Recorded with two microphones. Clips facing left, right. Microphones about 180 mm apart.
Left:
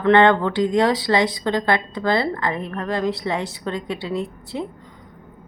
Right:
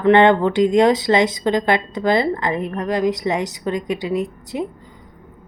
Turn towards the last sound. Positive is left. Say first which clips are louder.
# right 3 dB
turn(degrees=-15)  # may be behind; listen again after turning